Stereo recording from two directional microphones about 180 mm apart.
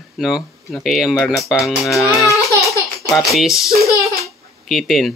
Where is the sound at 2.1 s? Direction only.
15° left (ahead or behind).